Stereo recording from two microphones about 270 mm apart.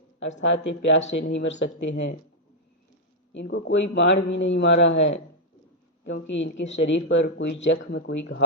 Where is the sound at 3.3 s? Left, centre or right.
Left.